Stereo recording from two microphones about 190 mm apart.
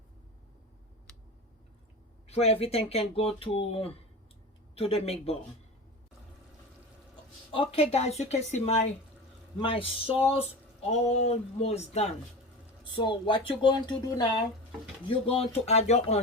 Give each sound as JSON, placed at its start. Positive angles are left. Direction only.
{"t": 2.2, "sound": "speech", "side_deg": 35}
{"t": 7.5, "sound": "speech", "side_deg": 30}